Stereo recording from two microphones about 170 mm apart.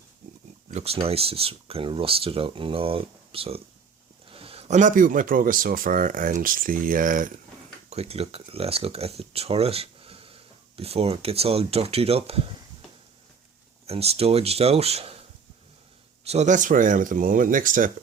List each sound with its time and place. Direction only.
0.7 s speech: 40° right (ahead or behind)
7.9 s speech: 35° right (ahead or behind)
13.8 s speech: 35° right (ahead or behind)
16.2 s speech: 40° right (ahead or behind)